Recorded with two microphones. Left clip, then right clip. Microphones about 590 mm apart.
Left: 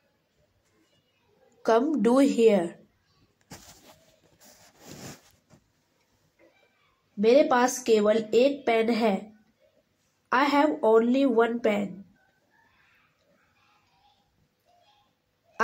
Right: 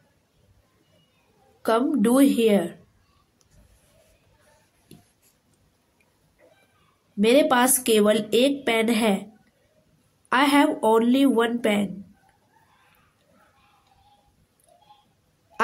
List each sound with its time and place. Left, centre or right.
1.6 s speech: right
7.2 s speech: right
10.3 s speech: right